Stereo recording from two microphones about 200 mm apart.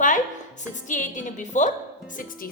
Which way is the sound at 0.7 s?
40° left (ahead or behind).